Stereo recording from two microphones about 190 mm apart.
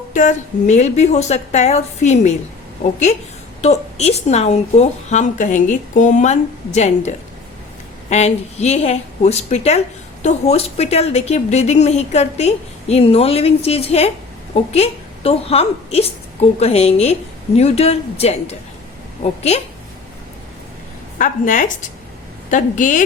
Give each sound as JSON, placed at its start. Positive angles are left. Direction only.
{"t": 0.1, "sound": "speech", "side_deg": 40}
{"t": 3.6, "sound": "speech", "side_deg": 35}
{"t": 8.1, "sound": "a woman's voice", "side_deg": 35}
{"t": 21.2, "sound": "a woman's voice", "side_deg": 45}